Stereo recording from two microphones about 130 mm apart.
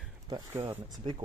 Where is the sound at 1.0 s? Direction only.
40° right (ahead or behind).